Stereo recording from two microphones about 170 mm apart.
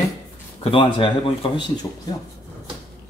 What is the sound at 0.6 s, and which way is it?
Speech, 30° left (ahead or behind).